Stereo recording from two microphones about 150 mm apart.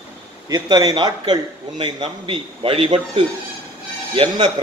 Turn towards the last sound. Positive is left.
turn(degrees=-35)  # may be behind; listen again after turning